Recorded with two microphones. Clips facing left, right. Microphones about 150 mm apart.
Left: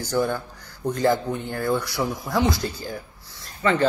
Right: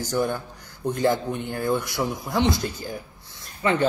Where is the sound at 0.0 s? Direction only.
15° right (ahead or behind).